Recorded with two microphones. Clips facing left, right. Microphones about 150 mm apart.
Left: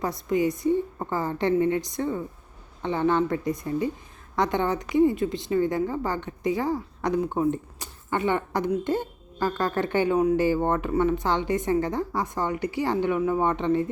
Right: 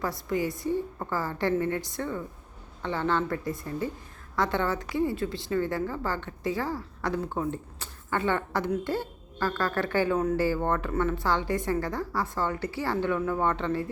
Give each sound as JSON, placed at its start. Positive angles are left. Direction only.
{"t": 0.0, "sound": "a woman's voice", "side_deg": 20}